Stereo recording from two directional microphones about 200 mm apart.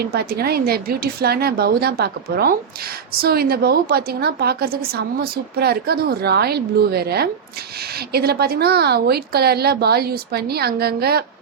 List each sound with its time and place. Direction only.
0.0 s a woman's voice: 50° right (ahead or behind)